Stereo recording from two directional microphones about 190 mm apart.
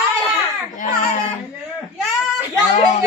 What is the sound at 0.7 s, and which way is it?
Speech, 45° left (ahead or behind).